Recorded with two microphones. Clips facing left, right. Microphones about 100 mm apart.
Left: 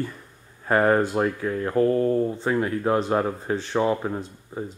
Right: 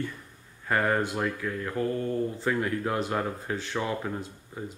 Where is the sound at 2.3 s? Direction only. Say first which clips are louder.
Left 4 dB; 25° left (ahead or behind).